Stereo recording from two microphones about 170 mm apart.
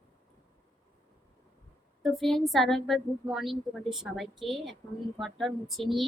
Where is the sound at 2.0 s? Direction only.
Centre (ahead or behind).